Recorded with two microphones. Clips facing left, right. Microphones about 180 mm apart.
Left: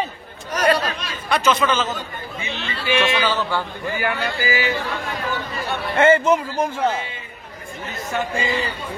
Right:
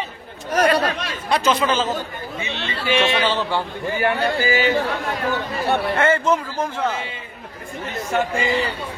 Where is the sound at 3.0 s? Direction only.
25° right (ahead or behind).